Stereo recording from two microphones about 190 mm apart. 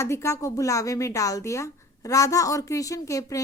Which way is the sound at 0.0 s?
15° left (ahead or behind).